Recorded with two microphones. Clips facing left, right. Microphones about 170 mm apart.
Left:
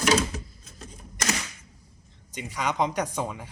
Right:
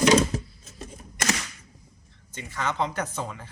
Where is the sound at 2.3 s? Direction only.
15° left (ahead or behind).